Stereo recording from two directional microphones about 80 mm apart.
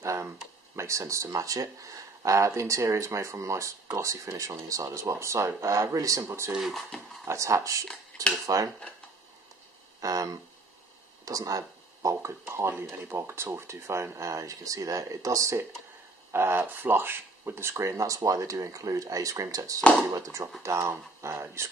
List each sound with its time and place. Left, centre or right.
0.0 s a sound: right
0.7 s speech: right
6.5 s speech: centre
7.2 s speech: right
8.1 s speech: centre
9.9 s speech: right
16.3 s speech: right
19.8 s speech: centre
20.2 s speech: right